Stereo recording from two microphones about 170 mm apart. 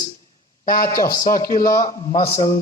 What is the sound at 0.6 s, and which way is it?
Speech, 55° left (ahead or behind).